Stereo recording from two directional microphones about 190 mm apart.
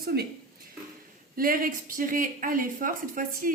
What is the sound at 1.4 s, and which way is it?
Speech, 50° right (ahead or behind).